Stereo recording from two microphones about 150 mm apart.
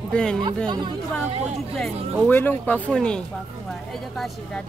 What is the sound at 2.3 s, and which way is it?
Speech, 10° left (ahead or behind).